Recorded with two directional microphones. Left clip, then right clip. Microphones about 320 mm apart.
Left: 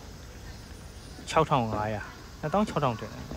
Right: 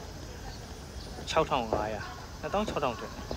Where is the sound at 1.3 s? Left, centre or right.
Centre.